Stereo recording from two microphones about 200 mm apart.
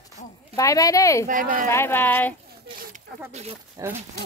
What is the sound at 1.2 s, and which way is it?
Speech, 40° right (ahead or behind).